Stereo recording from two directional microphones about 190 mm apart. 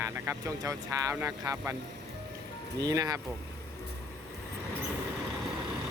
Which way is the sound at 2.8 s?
20° right (ahead or behind).